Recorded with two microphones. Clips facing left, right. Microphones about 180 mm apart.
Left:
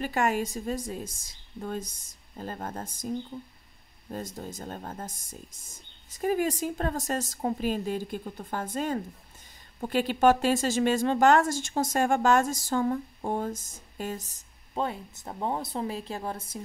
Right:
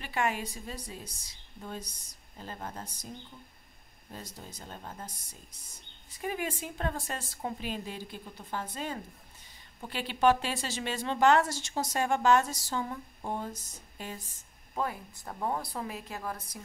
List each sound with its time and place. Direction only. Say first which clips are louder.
0.0 s speech: left 5 dB; 45° left (ahead or behind)
4.1 s speech: left 9 dB; 50° left (ahead or behind)
14.7 s speech: left 3 dB; 25° left (ahead or behind)